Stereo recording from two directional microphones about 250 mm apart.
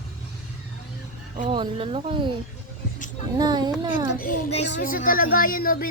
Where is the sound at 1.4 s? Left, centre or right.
Centre.